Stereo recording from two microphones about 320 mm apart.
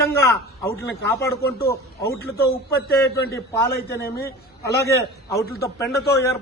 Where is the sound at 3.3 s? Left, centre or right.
Centre.